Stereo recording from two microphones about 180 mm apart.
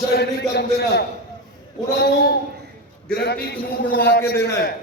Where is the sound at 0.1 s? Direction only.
65° left (ahead or behind).